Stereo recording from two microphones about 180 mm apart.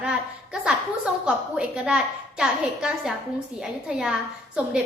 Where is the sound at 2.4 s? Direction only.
5° right (ahead or behind).